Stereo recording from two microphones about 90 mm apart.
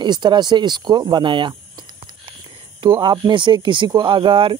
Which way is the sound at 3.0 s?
60° right (ahead or behind).